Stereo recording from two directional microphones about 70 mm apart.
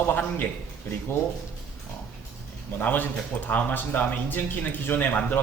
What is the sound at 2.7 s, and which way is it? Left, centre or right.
Speech, left.